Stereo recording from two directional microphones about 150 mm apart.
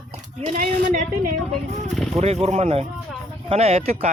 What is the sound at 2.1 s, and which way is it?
Speech, 45° right (ahead or behind).